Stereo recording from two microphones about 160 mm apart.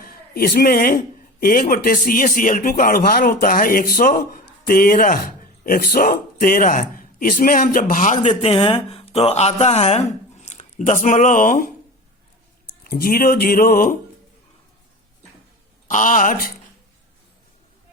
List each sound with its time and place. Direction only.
0.0 s a man's voice: 65° left (ahead or behind)
12.8 s speech: 65° left (ahead or behind)
15.9 s speech: 55° left (ahead or behind)